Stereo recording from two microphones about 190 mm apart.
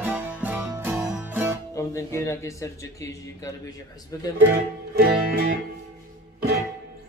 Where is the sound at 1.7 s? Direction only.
15° left (ahead or behind).